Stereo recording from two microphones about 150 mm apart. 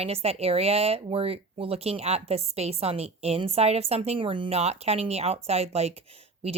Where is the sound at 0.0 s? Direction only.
40° right (ahead or behind).